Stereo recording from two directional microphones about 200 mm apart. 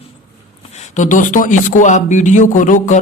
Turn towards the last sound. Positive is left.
turn(degrees=40)  # may be behind; listen again after turning